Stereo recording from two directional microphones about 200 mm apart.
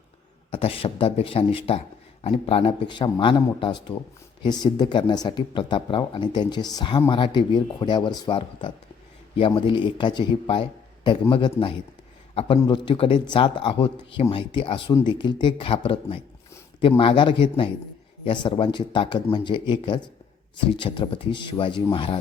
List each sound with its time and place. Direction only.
0.5 s a man's voice: 30° left (ahead or behind)